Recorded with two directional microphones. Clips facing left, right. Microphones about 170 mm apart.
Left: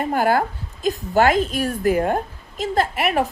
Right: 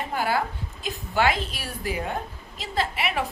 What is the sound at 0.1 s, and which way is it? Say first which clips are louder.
A woman's voice: left 6 dB; 50° left (ahead or behind).